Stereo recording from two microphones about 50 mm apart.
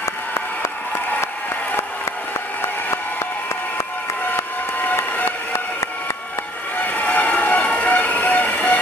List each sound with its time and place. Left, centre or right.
0.0 s a sound: left
4.8 s vehicle: left
6.8 s vehicle: left